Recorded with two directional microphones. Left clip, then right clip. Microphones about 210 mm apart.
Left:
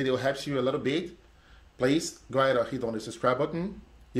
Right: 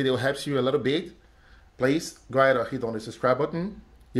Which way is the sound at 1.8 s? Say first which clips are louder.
Right 2 dB; 15° right (ahead or behind).